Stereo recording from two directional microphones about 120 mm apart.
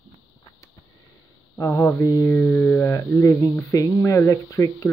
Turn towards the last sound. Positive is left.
turn(degrees=25)  # may be behind; listen again after turning